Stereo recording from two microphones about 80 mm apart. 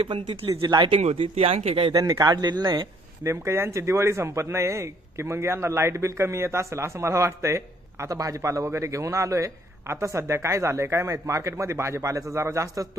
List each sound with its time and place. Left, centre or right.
0.0 s speech: right
2.0 s speech: right
3.3 s speech: right